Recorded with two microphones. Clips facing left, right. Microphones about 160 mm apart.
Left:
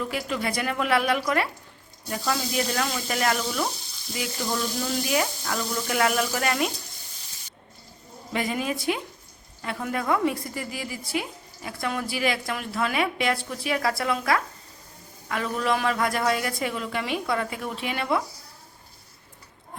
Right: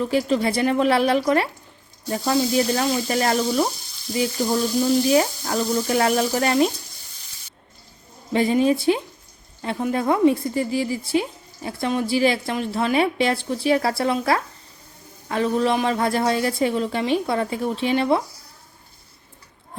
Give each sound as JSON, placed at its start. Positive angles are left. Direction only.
{"t": 0.0, "sound": "speech", "side_deg": -30}
{"t": 4.8, "sound": "speech", "side_deg": -30}
{"t": 8.3, "sound": "a woman's voice", "side_deg": -30}